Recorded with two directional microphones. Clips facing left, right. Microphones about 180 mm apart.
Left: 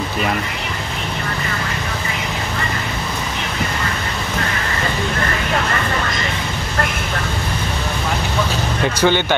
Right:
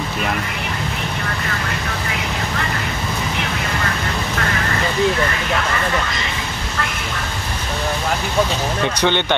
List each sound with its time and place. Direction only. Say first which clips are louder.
8.8 s speech: left 3 dB; 5° left (ahead or behind)